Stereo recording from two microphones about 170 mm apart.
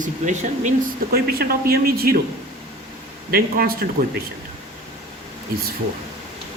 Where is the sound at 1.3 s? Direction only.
65° right (ahead or behind).